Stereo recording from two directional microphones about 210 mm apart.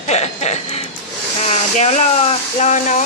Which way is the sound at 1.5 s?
35° left (ahead or behind).